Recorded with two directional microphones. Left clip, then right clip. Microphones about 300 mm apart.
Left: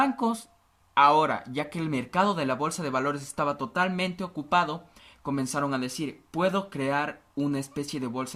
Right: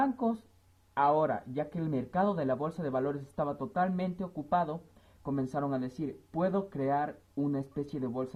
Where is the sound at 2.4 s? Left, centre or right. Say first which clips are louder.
Left 4 dB; centre.